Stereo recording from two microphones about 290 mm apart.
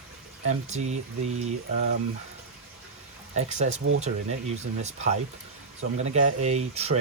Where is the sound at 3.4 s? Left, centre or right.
Right.